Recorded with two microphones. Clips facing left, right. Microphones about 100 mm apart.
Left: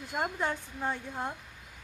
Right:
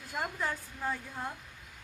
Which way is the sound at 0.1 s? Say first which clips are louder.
Left 3 dB; 15° left (ahead or behind).